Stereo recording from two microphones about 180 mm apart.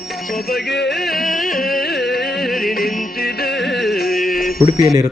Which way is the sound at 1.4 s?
50° left (ahead or behind).